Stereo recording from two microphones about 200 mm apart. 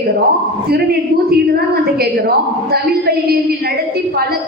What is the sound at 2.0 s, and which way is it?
Speech, 50° right (ahead or behind).